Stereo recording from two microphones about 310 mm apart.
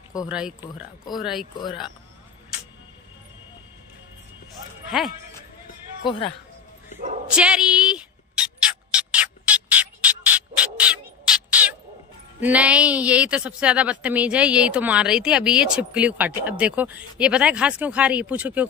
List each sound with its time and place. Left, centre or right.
0.3 s a woman's voice: centre
4.9 s a woman's voice: centre
6.0 s speech: centre
7.2 s a sound: centre
12.4 s a woman's voice: centre